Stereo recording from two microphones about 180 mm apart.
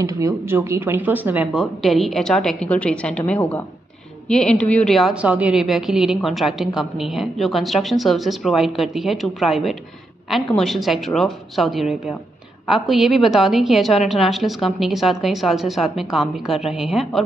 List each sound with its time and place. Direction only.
0.0 s a woman's voice: 15° right (ahead or behind)